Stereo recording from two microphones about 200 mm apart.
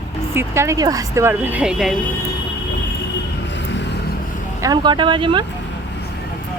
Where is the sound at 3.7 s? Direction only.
60° left (ahead or behind).